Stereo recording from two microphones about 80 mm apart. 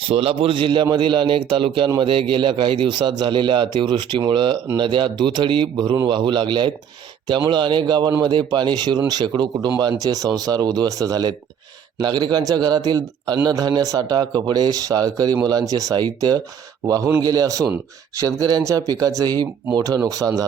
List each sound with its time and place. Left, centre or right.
0.5 s a man's voice: right
4.3 s a man's voice: right
6.1 s a man's voice: right
10.0 s speech: right
11.9 s a man's voice: right